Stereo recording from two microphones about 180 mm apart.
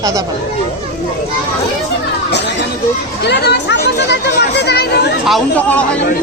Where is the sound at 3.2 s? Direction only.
65° left (ahead or behind).